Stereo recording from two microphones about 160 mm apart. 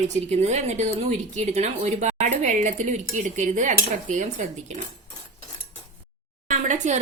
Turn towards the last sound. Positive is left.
turn(degrees=-50)  # may be behind; listen again after turning